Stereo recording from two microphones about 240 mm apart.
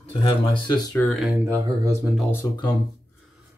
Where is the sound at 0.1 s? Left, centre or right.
Left.